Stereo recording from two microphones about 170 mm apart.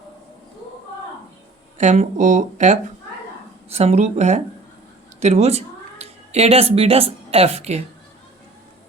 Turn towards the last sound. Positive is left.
turn(degrees=-40)  # may be behind; listen again after turning